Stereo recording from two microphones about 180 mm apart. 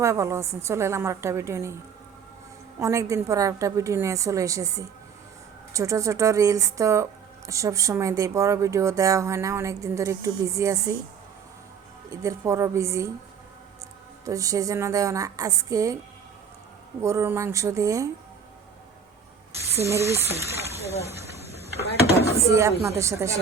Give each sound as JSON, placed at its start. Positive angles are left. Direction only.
{"t": 0.0, "sound": "speech", "side_deg": -15}
{"t": 2.8, "sound": "speech", "side_deg": -15}
{"t": 12.1, "sound": "speech", "side_deg": -15}
{"t": 14.3, "sound": "a woman's voice", "side_deg": -20}
{"t": 17.0, "sound": "speech", "side_deg": -15}
{"t": 19.7, "sound": "speech", "side_deg": -15}
{"t": 22.1, "sound": "speech", "side_deg": 60}
{"t": 22.8, "sound": "speech", "side_deg": -15}